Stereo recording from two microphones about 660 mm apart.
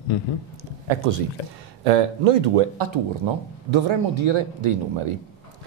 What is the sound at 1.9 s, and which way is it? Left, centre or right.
Speech, right.